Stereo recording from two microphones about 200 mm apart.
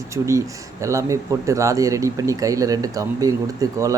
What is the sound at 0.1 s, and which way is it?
A man's voice, 15° right (ahead or behind).